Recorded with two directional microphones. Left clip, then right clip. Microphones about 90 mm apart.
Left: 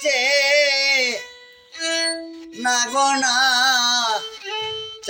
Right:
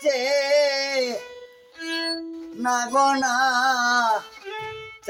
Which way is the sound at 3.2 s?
60° right (ahead or behind).